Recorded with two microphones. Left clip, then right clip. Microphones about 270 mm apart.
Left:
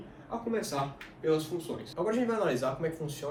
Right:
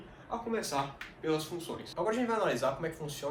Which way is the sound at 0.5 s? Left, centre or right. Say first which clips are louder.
Left 1 dB; centre.